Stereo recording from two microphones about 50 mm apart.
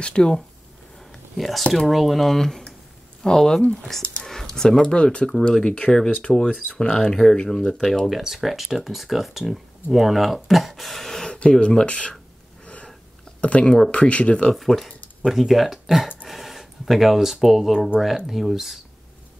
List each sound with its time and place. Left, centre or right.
0.0 s speech: centre
1.3 s speech: centre
8.1 s speech: centre
11.6 s speech: centre
13.4 s speech: left
14.5 s speech: centre
17.7 s speech: centre
18.0 s speech: centre